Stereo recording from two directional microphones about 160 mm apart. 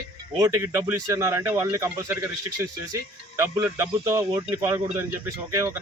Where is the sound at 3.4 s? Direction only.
15° right (ahead or behind).